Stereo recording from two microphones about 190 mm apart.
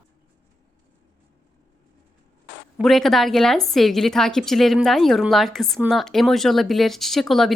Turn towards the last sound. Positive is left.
turn(degrees=0)  # may be behind; listen again after turning